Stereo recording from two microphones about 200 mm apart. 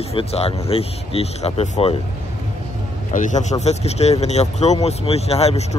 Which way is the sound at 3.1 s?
35° left (ahead or behind).